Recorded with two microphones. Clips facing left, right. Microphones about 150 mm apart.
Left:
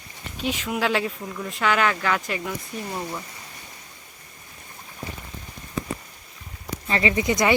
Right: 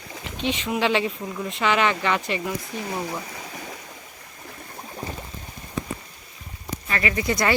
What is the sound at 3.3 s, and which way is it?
Stream, 90° right.